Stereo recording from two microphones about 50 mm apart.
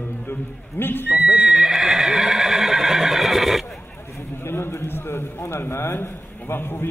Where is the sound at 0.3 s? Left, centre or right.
Left.